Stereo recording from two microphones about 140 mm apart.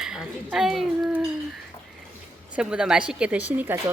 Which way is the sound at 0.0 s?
5° right (ahead or behind).